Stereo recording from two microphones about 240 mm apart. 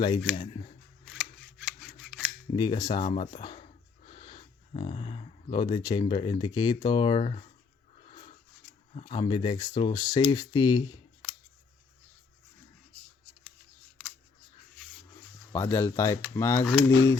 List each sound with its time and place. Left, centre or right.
0.3 s speech: left
1.0 s scissors: centre
2.5 s speech: centre
9.0 s speech: left
15.5 s speech: centre